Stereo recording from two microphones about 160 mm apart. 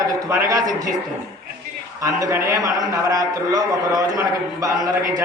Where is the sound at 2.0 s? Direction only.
20° right (ahead or behind).